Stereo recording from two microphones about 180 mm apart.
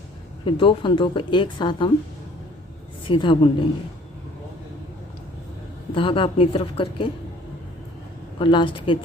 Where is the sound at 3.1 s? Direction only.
30° left (ahead or behind).